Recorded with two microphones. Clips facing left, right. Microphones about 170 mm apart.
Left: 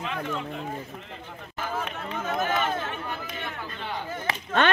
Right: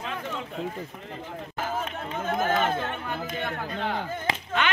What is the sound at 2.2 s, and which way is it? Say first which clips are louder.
Run: right 2 dB; 50° right (ahead or behind).